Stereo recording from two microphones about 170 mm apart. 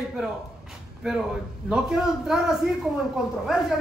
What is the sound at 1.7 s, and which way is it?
A man's voice, 5° right (ahead or behind).